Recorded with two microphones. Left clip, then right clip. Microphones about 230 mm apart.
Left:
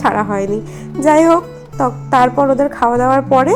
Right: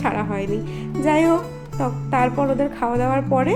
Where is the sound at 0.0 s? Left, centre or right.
Centre.